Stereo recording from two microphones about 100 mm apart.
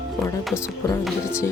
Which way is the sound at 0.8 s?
30° left (ahead or behind).